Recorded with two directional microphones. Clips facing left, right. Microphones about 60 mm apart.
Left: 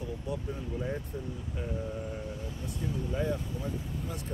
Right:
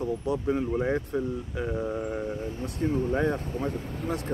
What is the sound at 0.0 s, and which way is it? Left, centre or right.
Speech, right.